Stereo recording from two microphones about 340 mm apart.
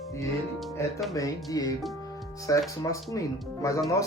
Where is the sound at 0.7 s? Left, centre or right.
Centre.